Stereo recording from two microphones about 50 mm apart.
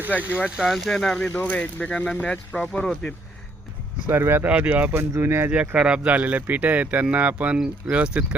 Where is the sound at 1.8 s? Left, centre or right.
Left.